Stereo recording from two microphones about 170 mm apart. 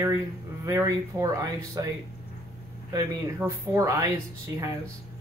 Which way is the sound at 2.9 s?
20° right (ahead or behind).